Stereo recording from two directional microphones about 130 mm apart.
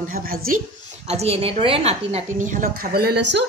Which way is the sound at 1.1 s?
50° right (ahead or behind).